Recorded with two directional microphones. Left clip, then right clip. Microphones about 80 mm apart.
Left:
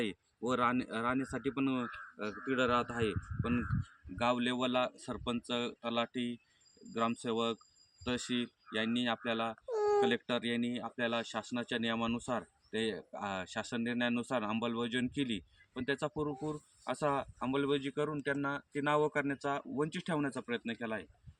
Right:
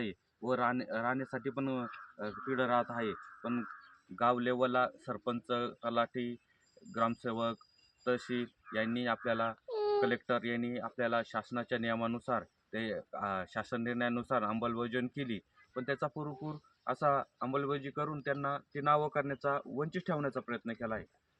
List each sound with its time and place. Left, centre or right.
0.7 s speech: right